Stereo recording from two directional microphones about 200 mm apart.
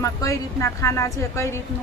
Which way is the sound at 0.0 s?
15° left (ahead or behind).